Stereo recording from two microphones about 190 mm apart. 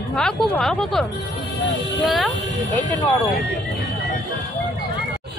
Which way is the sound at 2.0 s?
Centre (ahead or behind).